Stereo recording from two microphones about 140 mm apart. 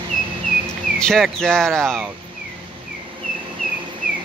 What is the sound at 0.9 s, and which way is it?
Speech, 5° left (ahead or behind).